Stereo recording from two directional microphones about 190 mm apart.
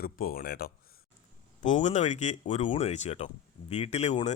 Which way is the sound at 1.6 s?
40° left (ahead or behind).